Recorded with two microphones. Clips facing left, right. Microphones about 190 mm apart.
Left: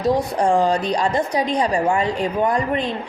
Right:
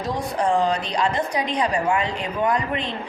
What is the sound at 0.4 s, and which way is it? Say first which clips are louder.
Speech: left 3 dB; 40° left (ahead or behind).